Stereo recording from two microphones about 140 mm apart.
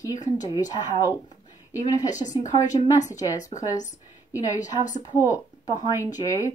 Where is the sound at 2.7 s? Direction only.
60° left (ahead or behind).